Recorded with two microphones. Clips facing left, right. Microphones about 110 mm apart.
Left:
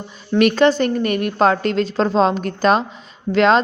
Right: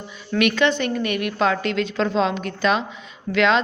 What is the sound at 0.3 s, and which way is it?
A woman's voice, 40° left (ahead or behind).